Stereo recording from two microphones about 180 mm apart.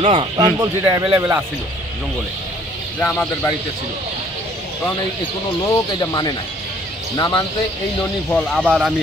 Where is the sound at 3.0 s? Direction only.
5° left (ahead or behind).